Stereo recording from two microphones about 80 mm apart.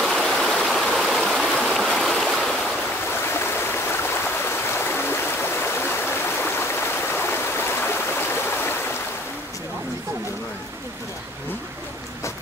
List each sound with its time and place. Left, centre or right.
0.0 s stream: centre
3.3 s stream: left